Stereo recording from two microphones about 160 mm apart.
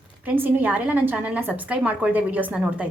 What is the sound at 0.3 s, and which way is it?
A woman's voice, 10° right (ahead or behind).